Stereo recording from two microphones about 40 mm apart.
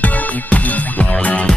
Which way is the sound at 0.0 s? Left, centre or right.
Left.